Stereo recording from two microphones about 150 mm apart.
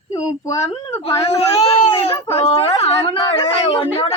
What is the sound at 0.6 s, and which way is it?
Speech, 35° left (ahead or behind).